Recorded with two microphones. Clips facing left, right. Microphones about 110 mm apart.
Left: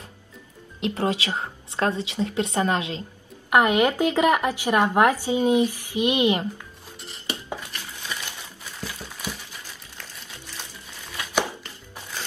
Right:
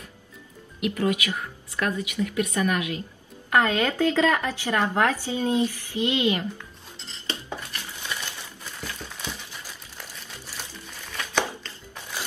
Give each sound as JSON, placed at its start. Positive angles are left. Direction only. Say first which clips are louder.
{"t": 0.7, "sound": "a woman's voice", "louder": "even", "side_deg": 30}
{"t": 7.0, "sound": "dishes", "louder": "left 1 dB", "side_deg": 15}
{"t": 8.8, "sound": "a sound", "louder": "left 2 dB", "side_deg": 10}
{"t": 9.9, "sound": "music", "louder": "right 1 dB", "side_deg": -10}
{"t": 11.1, "sound": "chopping", "louder": "left 1 dB", "side_deg": 15}